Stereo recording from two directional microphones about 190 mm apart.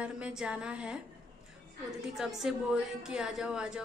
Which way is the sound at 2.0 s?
Centre (ahead or behind).